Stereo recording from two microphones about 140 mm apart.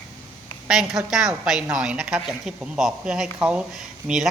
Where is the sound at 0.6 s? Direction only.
5° right (ahead or behind).